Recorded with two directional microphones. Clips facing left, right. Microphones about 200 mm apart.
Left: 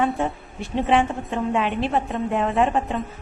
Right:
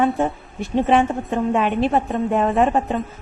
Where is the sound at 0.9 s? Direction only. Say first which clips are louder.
Right 2 dB; 45° right (ahead or behind).